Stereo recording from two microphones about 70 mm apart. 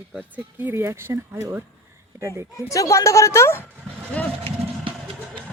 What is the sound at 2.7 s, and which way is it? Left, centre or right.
Speech, left.